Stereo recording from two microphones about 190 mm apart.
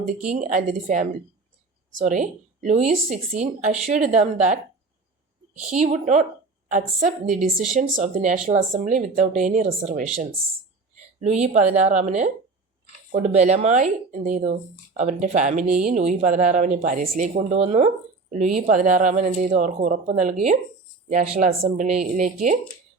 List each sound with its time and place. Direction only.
0.3 s speech: 40° right (ahead or behind)
5.7 s speech: 35° right (ahead or behind)
11.2 s speech: 35° right (ahead or behind)